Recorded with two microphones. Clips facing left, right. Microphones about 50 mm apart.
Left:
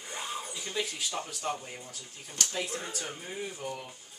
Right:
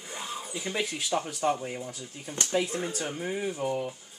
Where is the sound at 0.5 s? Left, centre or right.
Centre.